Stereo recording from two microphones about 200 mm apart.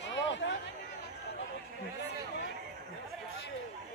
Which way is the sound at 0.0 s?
65° left (ahead or behind).